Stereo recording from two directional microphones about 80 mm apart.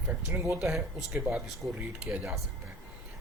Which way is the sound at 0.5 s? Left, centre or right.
Centre.